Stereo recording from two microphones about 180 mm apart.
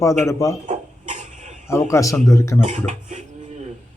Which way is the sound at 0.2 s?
15° left (ahead or behind).